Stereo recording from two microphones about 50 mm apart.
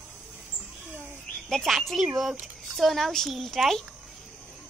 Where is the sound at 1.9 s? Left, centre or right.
Centre.